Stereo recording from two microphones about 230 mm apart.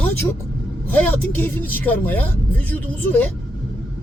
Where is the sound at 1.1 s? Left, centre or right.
Centre.